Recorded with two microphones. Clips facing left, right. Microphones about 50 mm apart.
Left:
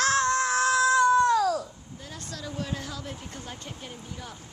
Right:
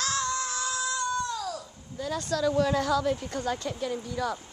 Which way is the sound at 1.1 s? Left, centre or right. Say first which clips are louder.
Left 10 dB; left.